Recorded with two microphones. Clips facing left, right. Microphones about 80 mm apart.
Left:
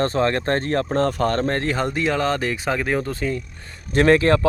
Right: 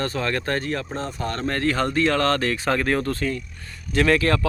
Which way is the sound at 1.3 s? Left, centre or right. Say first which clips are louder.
Left 2 dB; left.